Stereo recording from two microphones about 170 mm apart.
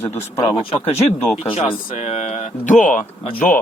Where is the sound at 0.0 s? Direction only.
15° left (ahead or behind).